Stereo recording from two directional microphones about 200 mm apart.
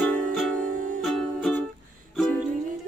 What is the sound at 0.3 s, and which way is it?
Music, centre (ahead or behind).